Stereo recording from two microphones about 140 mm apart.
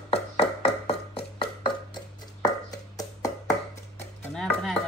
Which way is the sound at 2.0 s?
25° left (ahead or behind).